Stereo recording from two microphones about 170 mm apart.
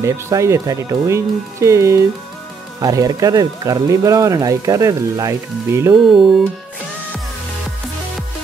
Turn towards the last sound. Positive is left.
turn(degrees=0)  # may be behind; listen again after turning